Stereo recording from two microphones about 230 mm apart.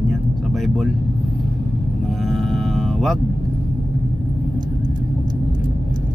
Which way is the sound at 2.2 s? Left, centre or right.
Centre.